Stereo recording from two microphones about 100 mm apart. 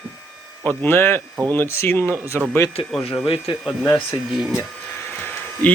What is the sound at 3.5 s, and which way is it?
Speech, 60° left (ahead or behind).